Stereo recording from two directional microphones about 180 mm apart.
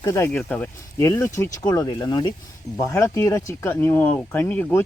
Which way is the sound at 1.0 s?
15° left (ahead or behind).